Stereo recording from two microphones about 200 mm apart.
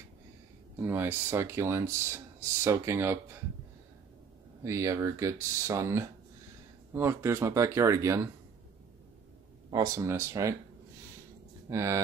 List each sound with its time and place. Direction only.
0.7 s speech: 10° right (ahead or behind)
4.6 s speech: 15° right (ahead or behind)
9.7 s speech: 20° right (ahead or behind)
11.7 s speech: 15° right (ahead or behind)